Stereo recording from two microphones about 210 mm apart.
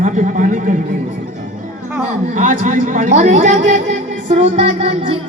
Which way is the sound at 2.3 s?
40° right (ahead or behind).